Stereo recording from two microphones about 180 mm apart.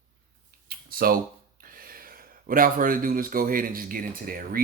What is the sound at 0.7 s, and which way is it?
Speech, 55° right (ahead or behind).